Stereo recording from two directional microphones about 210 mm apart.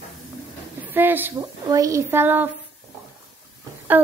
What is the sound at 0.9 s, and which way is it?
A woman's voice, 10° right (ahead or behind).